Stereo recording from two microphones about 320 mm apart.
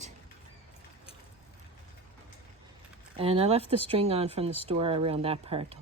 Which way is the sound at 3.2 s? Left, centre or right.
Centre.